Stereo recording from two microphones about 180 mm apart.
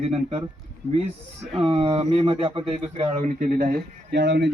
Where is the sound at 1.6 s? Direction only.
30° right (ahead or behind).